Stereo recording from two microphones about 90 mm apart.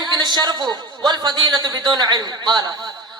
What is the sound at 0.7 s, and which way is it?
A woman's voice, 55° right (ahead or behind).